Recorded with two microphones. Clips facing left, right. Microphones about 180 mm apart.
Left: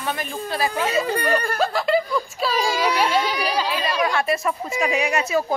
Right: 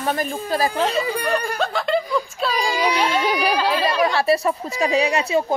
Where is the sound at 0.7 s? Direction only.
5° left (ahead or behind).